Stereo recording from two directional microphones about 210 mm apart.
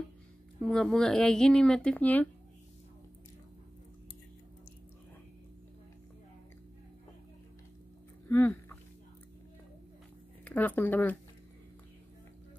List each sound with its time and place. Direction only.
0.6 s speech: 5° left (ahead or behind)
8.3 s a sound: 10° left (ahead or behind)
10.4 s speech: 10° left (ahead or behind)